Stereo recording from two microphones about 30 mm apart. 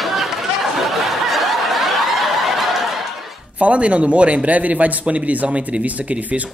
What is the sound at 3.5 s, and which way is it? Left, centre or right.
A man's voice, right.